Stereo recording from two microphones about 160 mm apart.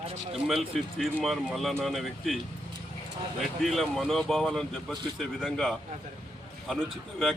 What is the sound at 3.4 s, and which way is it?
Speech, centre (ahead or behind).